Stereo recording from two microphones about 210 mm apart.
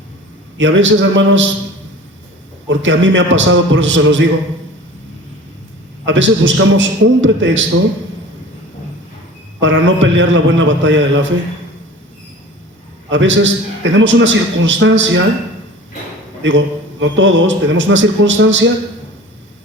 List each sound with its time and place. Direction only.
0.6 s a man's voice: 65° right (ahead or behind)
2.6 s a man's voice: 60° right (ahead or behind)
6.1 s a man's voice: 60° right (ahead or behind)
9.6 s a man's voice: 60° right (ahead or behind)
13.1 s a man's voice: 60° right (ahead or behind)
16.4 s a man's voice: 65° right (ahead or behind)